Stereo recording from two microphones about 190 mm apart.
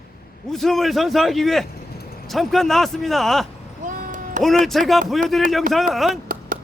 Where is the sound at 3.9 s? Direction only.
40° right (ahead or behind).